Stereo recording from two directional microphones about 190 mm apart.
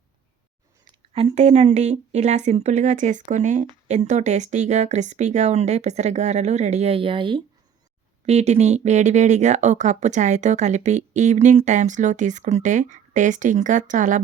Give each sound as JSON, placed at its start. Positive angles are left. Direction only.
{"t": 0.9, "sound": "a woman's voice", "side_deg": -30}